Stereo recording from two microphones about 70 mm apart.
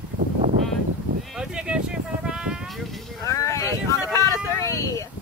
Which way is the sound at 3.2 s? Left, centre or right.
Left.